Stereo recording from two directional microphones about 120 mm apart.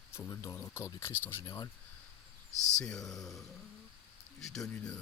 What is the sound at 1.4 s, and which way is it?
Speech, 35° left (ahead or behind).